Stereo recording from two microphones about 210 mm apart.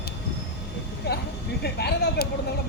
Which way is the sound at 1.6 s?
50° left (ahead or behind).